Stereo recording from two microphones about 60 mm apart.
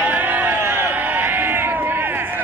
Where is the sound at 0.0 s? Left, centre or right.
Right.